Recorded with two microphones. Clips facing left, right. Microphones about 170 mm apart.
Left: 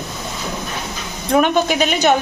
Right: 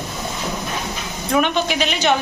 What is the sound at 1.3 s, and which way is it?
Speech, 45° left (ahead or behind).